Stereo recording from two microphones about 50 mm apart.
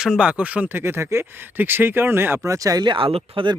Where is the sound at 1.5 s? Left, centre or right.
Right.